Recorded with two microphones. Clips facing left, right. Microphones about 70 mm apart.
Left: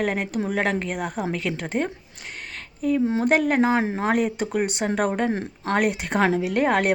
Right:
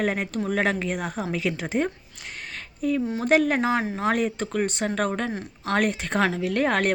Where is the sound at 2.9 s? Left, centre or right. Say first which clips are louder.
Left 6 dB; left.